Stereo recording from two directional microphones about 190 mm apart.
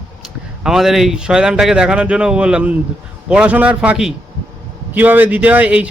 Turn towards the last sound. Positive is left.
turn(degrees=-5)  # may be behind; listen again after turning